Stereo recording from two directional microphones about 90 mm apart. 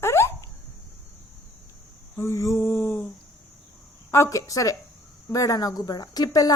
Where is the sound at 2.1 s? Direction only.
30° left (ahead or behind).